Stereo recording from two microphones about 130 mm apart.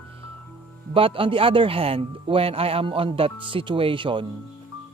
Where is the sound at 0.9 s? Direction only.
45° right (ahead or behind).